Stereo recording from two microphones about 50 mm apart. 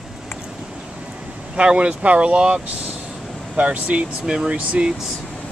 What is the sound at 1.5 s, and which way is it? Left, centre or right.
Speech, centre.